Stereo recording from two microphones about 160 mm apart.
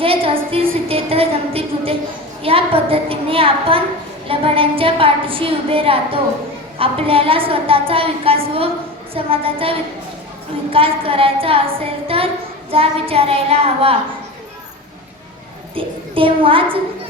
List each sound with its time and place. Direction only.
0.0 s a woman's voice: 35° right (ahead or behind)
15.7 s a woman's voice: 35° right (ahead or behind)